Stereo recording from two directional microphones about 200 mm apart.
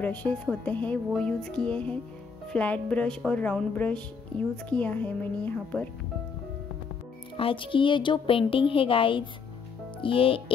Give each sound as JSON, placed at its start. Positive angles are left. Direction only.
{"t": 0.0, "sound": "speech", "side_deg": 5}
{"t": 7.3, "sound": "speech", "side_deg": 25}